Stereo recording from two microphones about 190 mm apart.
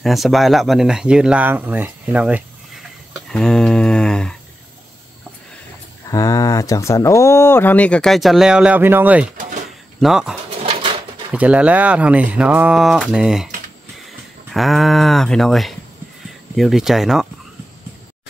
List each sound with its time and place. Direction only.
0.0 s speech: centre (ahead or behind)
6.0 s speech: 20° left (ahead or behind); by 10.3 s centre (ahead or behind)
10.6 s dog: 30° right (ahead or behind)
11.3 s speech: 5° right (ahead or behind)
14.5 s speech: centre (ahead or behind)